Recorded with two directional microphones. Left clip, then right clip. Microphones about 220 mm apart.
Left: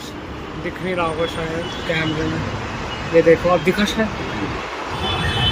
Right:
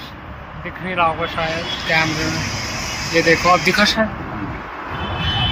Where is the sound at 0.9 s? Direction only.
15° left (ahead or behind).